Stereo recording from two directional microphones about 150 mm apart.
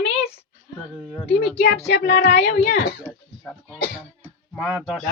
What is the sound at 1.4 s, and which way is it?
Speech, 90° left.